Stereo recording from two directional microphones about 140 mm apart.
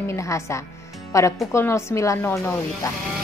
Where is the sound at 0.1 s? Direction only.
20° left (ahead or behind).